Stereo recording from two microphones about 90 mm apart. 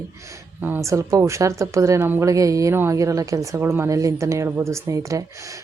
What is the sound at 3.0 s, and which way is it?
Speech, 40° right (ahead or behind).